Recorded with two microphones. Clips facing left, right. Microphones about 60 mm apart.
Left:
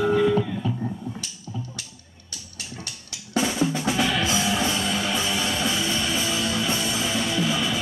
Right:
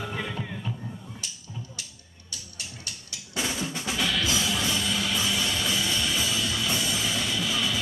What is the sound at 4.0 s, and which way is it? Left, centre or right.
Music, left.